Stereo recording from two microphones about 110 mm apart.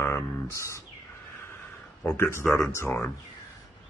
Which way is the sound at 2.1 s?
20° left (ahead or behind).